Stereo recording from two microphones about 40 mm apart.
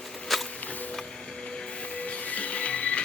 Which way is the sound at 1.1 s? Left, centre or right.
Centre.